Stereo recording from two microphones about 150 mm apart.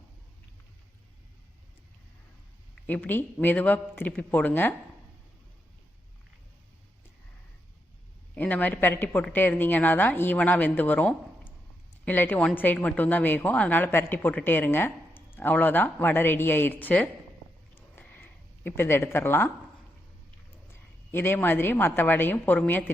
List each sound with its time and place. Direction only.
2.8 s a woman's voice: 10° left (ahead or behind)
8.4 s a woman's voice: 10° left (ahead or behind)
17.7 s a sound: 15° left (ahead or behind)
21.1 s a woman's voice: 15° left (ahead or behind)